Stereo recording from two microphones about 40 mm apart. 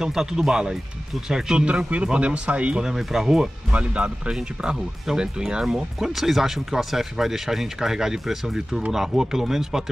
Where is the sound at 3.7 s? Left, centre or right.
Right.